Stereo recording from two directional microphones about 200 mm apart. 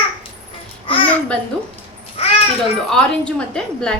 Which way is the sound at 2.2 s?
30° left (ahead or behind).